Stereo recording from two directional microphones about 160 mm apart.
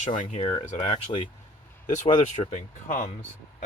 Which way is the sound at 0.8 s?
30° left (ahead or behind).